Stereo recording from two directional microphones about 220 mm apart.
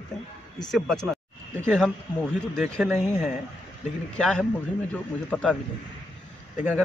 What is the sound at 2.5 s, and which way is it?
Speech, centre (ahead or behind).